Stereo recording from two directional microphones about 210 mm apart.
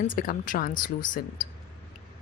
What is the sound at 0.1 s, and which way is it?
Speech, 40° left (ahead or behind).